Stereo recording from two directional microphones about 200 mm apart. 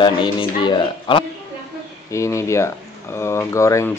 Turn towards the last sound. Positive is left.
turn(degrees=15)  # may be behind; listen again after turning